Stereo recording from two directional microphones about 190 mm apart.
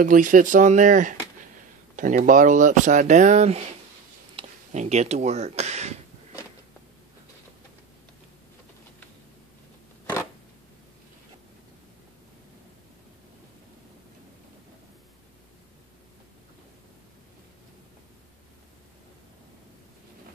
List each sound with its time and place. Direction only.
0.0 s speech: 45° right (ahead or behind)